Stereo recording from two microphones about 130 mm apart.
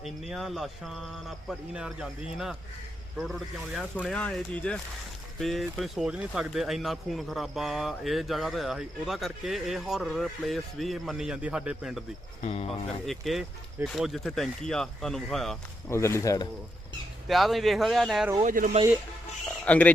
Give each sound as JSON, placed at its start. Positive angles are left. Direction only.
{"t": 0.0, "sound": "speech", "side_deg": 0}
{"t": 12.4, "sound": "speech", "side_deg": 55}
{"t": 13.1, "sound": "speech", "side_deg": 0}
{"t": 15.9, "sound": "speech", "side_deg": 20}
{"t": 17.2, "sound": "speech", "side_deg": 0}
{"t": 18.4, "sound": "speech", "side_deg": -80}
{"t": 19.6, "sound": "speech", "side_deg": 10}